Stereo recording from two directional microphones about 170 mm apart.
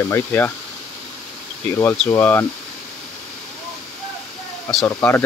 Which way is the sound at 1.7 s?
15° left (ahead or behind).